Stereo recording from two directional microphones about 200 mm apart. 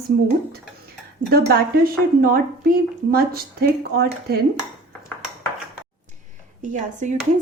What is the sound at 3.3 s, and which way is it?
A woman's voice, 50° right (ahead or behind).